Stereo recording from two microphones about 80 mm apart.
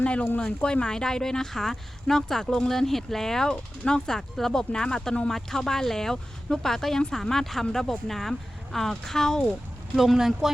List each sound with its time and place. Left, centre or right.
0.0 s speech: centre
9.9 s speech: centre